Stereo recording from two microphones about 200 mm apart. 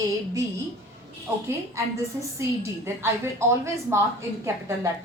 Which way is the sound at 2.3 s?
15° right (ahead or behind).